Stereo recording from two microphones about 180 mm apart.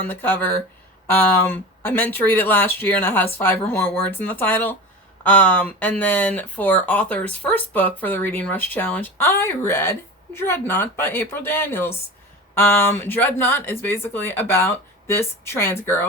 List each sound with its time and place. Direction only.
0.1 s speech: 10° left (ahead or behind)